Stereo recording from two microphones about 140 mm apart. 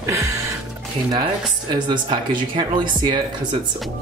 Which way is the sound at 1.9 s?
35° right (ahead or behind).